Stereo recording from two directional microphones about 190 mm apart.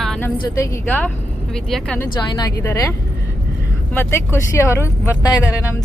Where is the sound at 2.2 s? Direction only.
20° left (ahead or behind).